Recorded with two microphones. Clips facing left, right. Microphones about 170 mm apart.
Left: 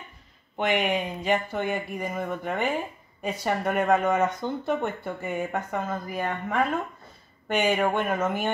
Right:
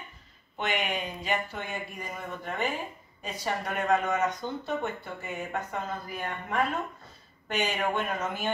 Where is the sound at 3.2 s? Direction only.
55° left (ahead or behind).